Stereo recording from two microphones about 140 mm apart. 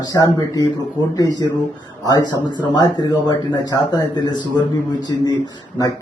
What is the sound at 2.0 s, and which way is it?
Speech, 30° left (ahead or behind).